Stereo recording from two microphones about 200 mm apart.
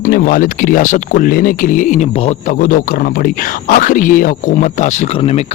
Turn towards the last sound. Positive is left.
turn(degrees=30)  # may be behind; listen again after turning